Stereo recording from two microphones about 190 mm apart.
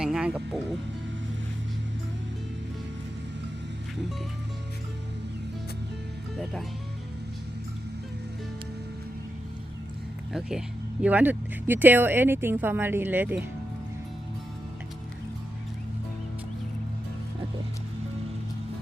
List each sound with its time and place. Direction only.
0.0 s speech: 5° right (ahead or behind)
6.3 s speech: centre (ahead or behind)
11.0 s speech: 10° right (ahead or behind)